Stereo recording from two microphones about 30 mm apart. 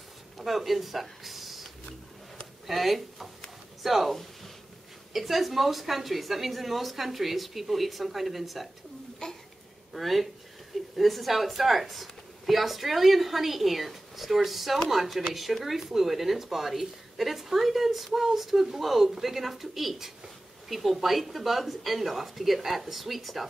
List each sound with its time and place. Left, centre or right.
0.4 s speech: centre
9.2 s a sound: left
9.9 s speech: centre